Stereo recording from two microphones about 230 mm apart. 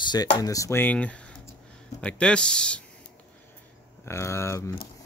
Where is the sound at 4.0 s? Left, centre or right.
Centre.